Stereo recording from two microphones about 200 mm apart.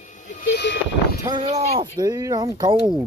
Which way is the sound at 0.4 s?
55° left (ahead or behind).